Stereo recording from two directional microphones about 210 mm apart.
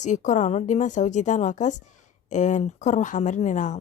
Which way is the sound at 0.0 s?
35° left (ahead or behind).